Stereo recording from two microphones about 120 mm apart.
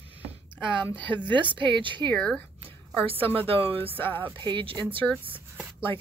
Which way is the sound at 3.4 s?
50° right (ahead or behind).